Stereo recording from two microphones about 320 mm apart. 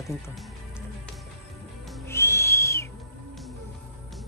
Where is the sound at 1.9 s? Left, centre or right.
Centre.